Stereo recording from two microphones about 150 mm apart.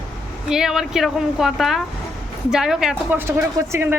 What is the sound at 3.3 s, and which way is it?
Speech, 15° right (ahead or behind).